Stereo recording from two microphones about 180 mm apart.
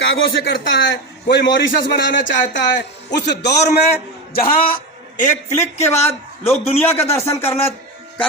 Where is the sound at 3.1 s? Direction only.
70° left (ahead or behind).